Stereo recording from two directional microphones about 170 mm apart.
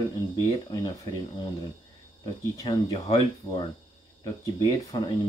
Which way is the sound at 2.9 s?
35° left (ahead or behind).